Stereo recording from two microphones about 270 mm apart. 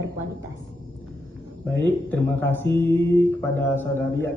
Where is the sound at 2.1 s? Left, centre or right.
Centre.